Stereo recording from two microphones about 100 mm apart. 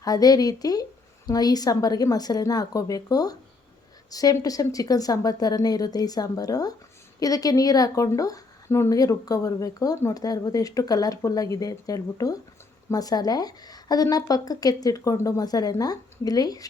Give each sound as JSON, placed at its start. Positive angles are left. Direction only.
{"t": 0.0, "sound": "speech", "side_deg": 40}